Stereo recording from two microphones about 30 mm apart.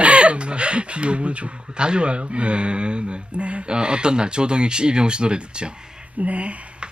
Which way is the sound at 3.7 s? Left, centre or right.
Right.